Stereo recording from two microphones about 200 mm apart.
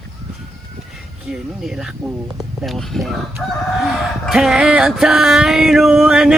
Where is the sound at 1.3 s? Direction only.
Centre (ahead or behind).